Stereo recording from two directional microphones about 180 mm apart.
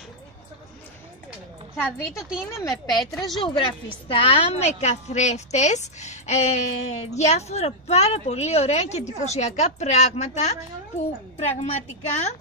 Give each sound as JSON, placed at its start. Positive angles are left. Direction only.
{"t": 1.8, "sound": "a woman's voice", "side_deg": 15}
{"t": 2.7, "sound": "a woman's voice", "side_deg": 0}
{"t": 3.3, "sound": "a woman's voice", "side_deg": 25}